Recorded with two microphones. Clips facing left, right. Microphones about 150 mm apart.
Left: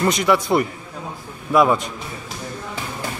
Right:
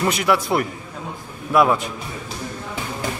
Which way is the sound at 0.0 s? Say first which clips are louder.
Left 2 dB; 5° right (ahead or behind).